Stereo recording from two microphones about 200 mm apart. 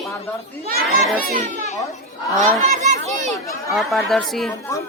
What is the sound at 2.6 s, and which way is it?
Speech, 35° right (ahead or behind).